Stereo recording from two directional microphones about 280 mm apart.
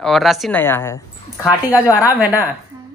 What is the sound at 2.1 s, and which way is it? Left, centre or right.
Speech, centre.